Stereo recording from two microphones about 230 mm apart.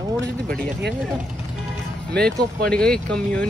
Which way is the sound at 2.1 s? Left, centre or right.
Centre.